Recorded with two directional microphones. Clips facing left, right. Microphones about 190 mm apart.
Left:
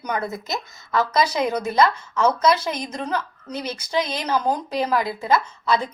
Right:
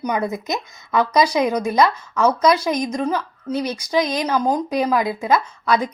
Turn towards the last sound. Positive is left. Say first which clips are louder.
# right 2 dB
turn(degrees=-10)  # may be behind; listen again after turning